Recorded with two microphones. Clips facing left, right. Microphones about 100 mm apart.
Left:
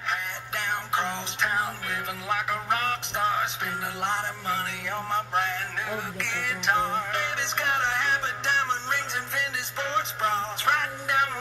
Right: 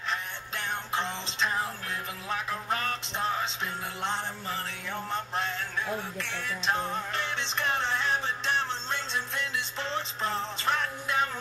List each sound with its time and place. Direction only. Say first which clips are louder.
0.1 s music: left 3 dB; 60° left (ahead or behind)